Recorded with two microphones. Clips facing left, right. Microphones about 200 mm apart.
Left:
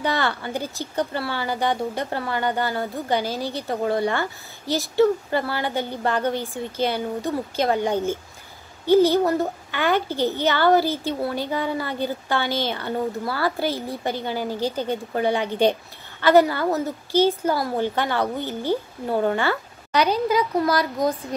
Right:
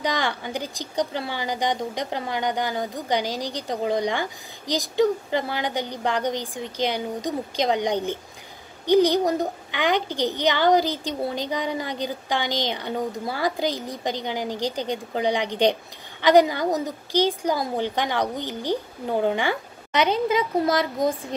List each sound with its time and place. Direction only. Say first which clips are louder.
0.0 s a woman's voice: left 2 dB; 15° right (ahead or behind)